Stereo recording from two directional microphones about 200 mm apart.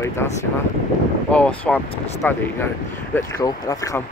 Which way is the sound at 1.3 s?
5° left (ahead or behind).